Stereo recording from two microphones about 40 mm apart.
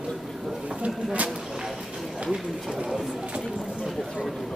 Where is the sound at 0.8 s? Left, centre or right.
Right.